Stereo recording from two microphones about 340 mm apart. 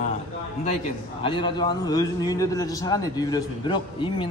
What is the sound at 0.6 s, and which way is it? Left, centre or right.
A man's voice, centre.